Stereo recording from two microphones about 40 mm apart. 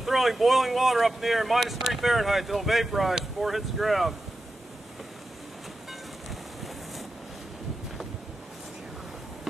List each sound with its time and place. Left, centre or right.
0.0 s speech: centre